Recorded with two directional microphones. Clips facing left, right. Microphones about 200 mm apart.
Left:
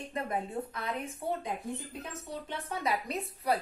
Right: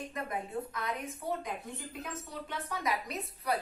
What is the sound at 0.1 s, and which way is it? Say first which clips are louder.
A woman's voice: left 6 dB; 30° left (ahead or behind).